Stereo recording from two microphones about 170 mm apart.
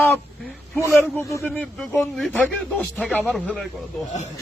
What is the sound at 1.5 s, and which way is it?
Speech, 5° left (ahead or behind).